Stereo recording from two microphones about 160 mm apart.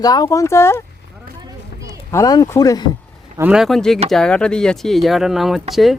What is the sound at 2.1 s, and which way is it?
Speech, 20° left (ahead or behind).